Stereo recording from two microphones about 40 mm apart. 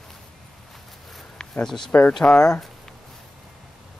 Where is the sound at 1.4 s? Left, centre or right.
Centre.